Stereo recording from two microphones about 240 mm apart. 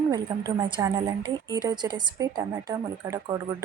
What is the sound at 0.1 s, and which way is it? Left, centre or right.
A woman's voice, centre.